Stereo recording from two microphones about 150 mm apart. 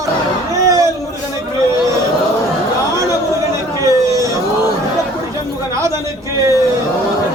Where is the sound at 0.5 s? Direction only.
20° right (ahead or behind).